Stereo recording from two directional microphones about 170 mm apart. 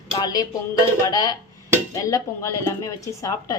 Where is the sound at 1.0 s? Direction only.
20° left (ahead or behind).